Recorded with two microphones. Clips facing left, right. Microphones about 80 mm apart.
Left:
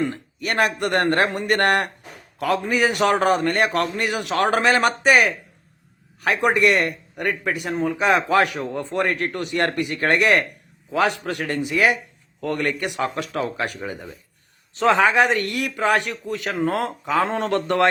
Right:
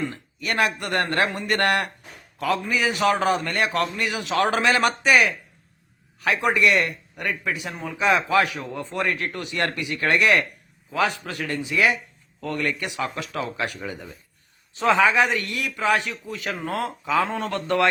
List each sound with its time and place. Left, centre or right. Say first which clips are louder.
0.1 s a man's voice: left 2 dB; left
1.0 s speech: left 3 dB; left
1.4 s a man's voice: left 3 dB; left
11.0 s speech: left 2 dB; left
11.4 s a man's voice: left 2 dB; left
13.7 s speech: left 2 dB; left
14.8 s a man's voice: left 2 dB; left